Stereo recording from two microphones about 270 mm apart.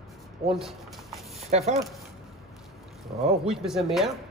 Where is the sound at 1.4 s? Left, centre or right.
Right.